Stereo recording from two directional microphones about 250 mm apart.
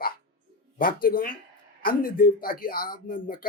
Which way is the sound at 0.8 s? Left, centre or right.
Left.